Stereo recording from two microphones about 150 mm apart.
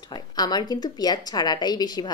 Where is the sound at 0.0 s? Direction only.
25° left (ahead or behind).